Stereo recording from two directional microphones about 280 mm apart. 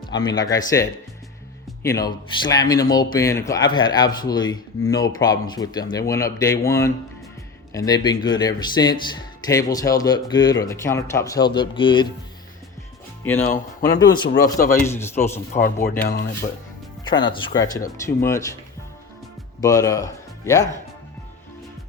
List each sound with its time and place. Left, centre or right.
0.0 s music: left
0.3 s speech: centre
14.1 s speech: centre
15.5 s speech: left
17.0 s speech: centre
19.6 s speech: centre